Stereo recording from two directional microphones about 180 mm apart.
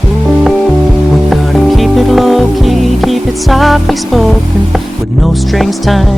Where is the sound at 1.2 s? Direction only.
Centre (ahead or behind).